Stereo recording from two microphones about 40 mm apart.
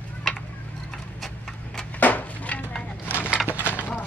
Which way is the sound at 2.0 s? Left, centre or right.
Left.